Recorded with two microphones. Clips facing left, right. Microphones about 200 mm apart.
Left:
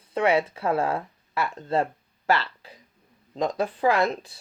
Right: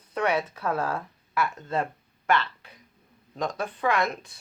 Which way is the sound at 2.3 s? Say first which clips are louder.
Left 1 dB; 30° left (ahead or behind).